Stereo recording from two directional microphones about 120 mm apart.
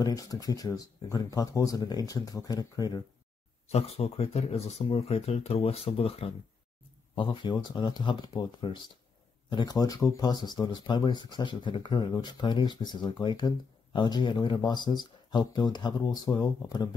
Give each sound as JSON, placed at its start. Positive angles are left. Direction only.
{"t": 0.0, "sound": "speech", "side_deg": 30}
{"t": 3.6, "sound": "speech", "side_deg": 60}